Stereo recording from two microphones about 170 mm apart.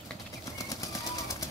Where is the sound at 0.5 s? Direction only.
20° left (ahead or behind).